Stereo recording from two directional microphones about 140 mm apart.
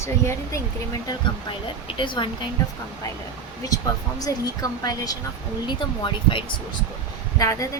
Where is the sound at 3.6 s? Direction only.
25° left (ahead or behind).